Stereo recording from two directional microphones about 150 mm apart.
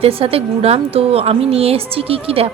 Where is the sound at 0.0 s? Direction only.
40° right (ahead or behind).